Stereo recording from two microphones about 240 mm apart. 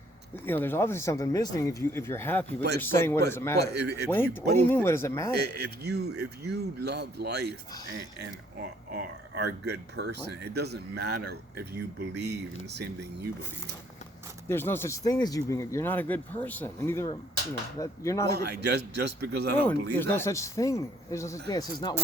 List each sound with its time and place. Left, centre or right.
0.4 s speech: centre
2.6 s speech: right
2.8 s speech: centre
3.6 s speech: right
4.1 s speech: centre
5.3 s speech: right
8.9 s speech: right
14.4 s speech: centre
18.3 s speech: right
20.0 s speech: centre